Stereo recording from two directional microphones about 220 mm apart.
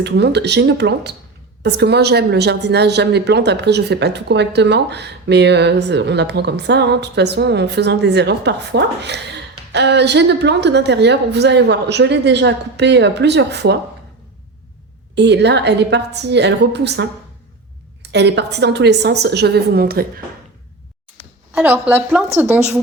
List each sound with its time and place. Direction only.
0.0 s a woman's voice: 50° right (ahead or behind)
15.1 s a woman's voice: 50° right (ahead or behind)
21.5 s a woman's voice: 10° right (ahead or behind)